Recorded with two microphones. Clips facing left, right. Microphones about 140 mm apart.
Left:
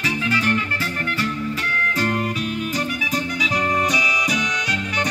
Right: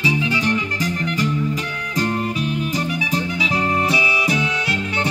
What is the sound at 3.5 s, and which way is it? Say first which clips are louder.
Music: right 1 dB; 30° right (ahead or behind).